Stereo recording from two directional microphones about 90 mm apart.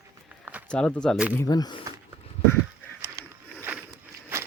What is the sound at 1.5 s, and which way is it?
Speech, 45° left (ahead or behind).